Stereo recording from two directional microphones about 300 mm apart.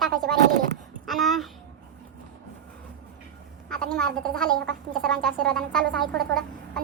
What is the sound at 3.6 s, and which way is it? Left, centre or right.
A woman's voice, centre.